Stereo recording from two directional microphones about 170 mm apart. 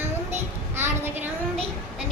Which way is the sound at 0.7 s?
15° right (ahead or behind).